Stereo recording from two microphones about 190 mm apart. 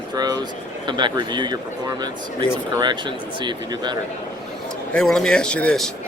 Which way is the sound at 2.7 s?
25° right (ahead or behind).